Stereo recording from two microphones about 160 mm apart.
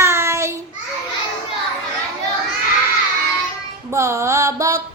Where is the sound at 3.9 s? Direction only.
20° right (ahead or behind).